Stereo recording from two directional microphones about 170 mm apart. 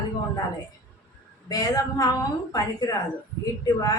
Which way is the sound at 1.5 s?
20° left (ahead or behind).